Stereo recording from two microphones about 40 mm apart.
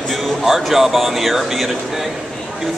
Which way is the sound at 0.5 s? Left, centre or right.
Centre.